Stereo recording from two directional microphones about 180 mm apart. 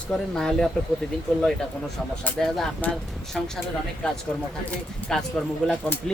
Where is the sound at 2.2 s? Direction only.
Centre (ahead or behind).